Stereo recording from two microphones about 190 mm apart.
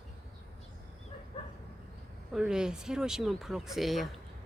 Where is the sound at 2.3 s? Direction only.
5° right (ahead or behind).